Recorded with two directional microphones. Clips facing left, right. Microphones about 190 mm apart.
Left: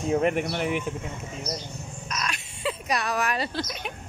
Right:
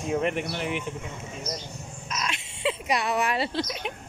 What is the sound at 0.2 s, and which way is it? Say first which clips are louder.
Speech: left 3 dB; 45° left (ahead or behind).